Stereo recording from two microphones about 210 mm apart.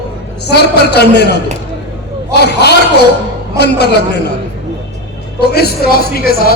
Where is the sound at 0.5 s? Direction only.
50° left (ahead or behind).